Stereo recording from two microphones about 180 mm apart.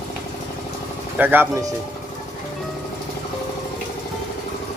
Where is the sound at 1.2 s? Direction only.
10° right (ahead or behind).